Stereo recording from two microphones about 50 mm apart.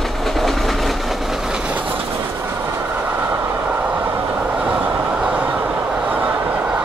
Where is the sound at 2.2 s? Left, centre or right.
Right.